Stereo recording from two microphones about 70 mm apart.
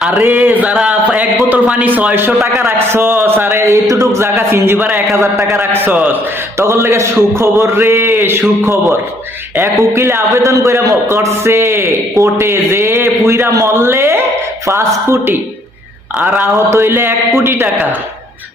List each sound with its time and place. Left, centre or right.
0.3 s a man's voice: right
3.8 s a man's voice: right
6.6 s a man's voice: right
9.9 s a man's voice: right
16.6 s a man's voice: right